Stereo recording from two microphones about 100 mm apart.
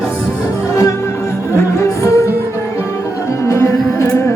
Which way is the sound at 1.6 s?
25° left (ahead or behind).